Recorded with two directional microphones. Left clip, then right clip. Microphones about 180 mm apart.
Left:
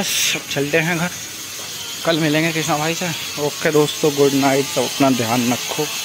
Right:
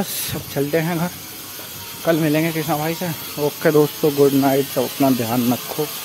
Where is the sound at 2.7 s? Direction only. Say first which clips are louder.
Left 2 dB; centre (ahead or behind).